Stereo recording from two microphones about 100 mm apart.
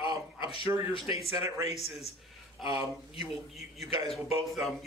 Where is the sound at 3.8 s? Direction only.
70° left (ahead or behind).